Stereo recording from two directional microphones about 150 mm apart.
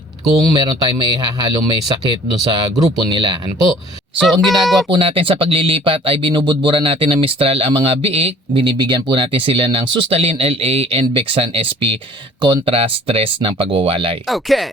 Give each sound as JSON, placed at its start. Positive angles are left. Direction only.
{"t": 0.5, "sound": "speech", "side_deg": -30}
{"t": 4.2, "sound": "speech", "side_deg": 0}
{"t": 4.9, "sound": "speech", "side_deg": -35}
{"t": 14.3, "sound": "speech", "side_deg": 0}